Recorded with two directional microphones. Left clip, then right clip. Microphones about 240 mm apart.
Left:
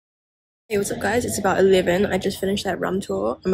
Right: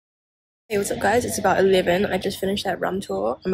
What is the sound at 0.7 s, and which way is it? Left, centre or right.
Speech, centre.